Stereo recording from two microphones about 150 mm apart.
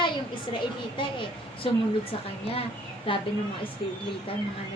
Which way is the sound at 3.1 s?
35° left (ahead or behind).